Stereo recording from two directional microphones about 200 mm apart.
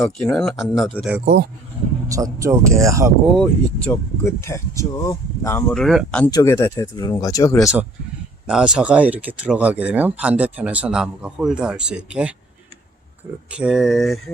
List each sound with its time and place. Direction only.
0.0 s speech: 10° left (ahead or behind)
0.3 s speech: centre (ahead or behind)
1.2 s speech: 45° right (ahead or behind)
2.0 s speech: 15° right (ahead or behind)
3.3 s speech: 5° left (ahead or behind)
8.4 s speech: 5° right (ahead or behind)
13.5 s speech: 5° right (ahead or behind)